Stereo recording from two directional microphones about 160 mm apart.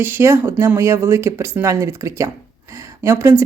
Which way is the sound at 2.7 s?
15° right (ahead or behind).